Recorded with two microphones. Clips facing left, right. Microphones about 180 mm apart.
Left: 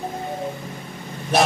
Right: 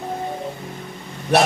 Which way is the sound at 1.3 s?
65° right (ahead or behind).